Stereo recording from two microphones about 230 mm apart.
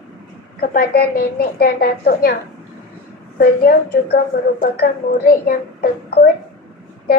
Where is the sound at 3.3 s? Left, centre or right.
Left.